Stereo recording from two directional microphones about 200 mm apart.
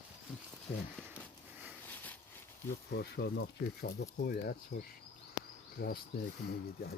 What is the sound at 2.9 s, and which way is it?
Speech, 55° left (ahead or behind).